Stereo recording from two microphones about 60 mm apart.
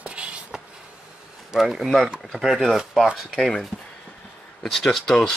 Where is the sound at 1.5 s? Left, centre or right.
Centre.